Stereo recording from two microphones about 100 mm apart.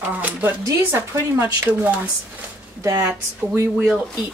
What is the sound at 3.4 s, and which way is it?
Speech, 35° right (ahead or behind).